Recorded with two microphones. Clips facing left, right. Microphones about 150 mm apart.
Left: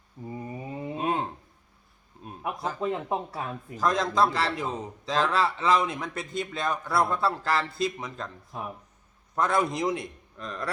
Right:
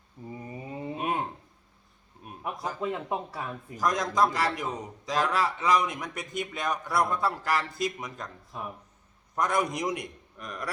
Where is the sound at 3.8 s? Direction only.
15° right (ahead or behind).